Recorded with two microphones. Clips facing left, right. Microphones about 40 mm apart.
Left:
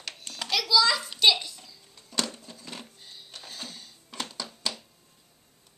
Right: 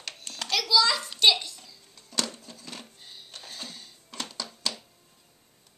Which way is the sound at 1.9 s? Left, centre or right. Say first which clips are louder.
Left 1 dB; centre.